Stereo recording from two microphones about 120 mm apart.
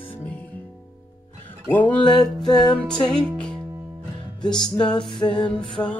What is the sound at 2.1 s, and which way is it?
Music, 35° left (ahead or behind).